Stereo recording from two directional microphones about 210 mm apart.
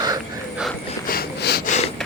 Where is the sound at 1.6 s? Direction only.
35° left (ahead or behind).